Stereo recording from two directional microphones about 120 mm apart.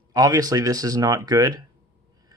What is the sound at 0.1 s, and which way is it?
Speech, 30° right (ahead or behind).